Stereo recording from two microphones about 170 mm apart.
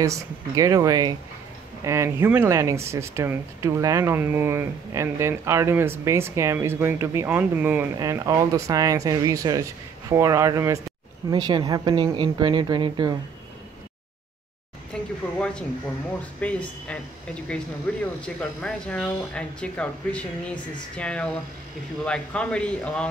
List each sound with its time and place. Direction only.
0.0 s speech: 20° right (ahead or behind)
14.9 s a sound: 5° left (ahead or behind)
15.3 s speech: 5° left (ahead or behind)